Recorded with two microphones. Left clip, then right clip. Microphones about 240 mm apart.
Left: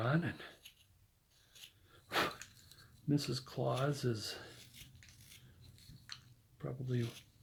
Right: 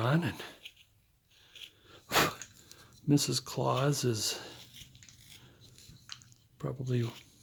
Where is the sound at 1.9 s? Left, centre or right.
Right.